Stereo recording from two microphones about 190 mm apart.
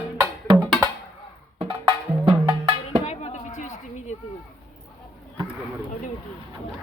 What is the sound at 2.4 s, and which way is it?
Music, 25° right (ahead or behind).